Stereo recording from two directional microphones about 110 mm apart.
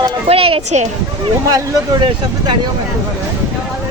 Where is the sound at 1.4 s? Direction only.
35° right (ahead or behind).